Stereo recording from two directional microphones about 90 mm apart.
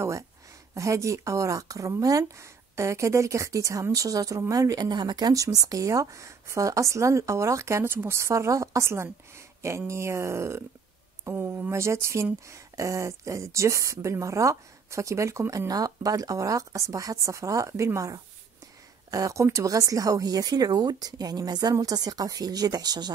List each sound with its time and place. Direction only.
0.7 s a woman's voice: 35° right (ahead or behind)